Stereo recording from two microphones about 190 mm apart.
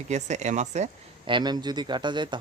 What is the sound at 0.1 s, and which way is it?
Speech, 40° right (ahead or behind).